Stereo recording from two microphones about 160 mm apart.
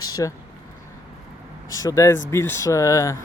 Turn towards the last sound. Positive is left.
turn(degrees=20)  # may be behind; listen again after turning